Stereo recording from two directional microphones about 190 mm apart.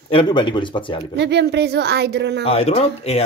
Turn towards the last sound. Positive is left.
turn(degrees=35)  # may be behind; listen again after turning